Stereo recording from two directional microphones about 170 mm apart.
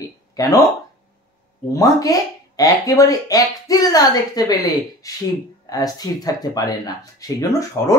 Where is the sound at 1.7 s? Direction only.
20° left (ahead or behind).